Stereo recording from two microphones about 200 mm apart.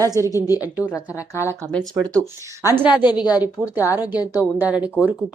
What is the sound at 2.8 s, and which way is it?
Speech, 20° left (ahead or behind).